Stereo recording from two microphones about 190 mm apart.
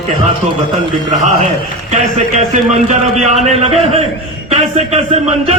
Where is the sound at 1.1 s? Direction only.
40° right (ahead or behind).